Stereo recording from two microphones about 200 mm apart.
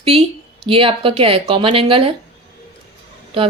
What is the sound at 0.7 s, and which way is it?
Speech, 25° right (ahead or behind).